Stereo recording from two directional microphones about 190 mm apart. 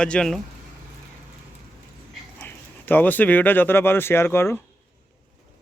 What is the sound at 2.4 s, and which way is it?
Speech, 10° left (ahead or behind).